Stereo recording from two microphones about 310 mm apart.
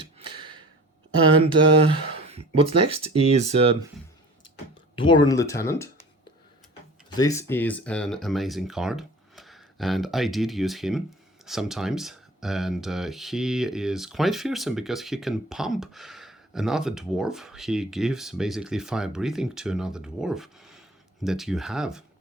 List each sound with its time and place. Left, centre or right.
0.3 s a sound: centre
1.5 s speech: centre
4.9 s speech: centre
7.2 s speech: centre